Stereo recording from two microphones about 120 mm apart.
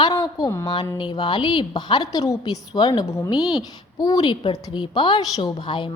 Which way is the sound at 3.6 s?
30° left (ahead or behind).